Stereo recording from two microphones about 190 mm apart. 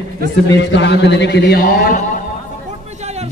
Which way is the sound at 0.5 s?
65° left (ahead or behind).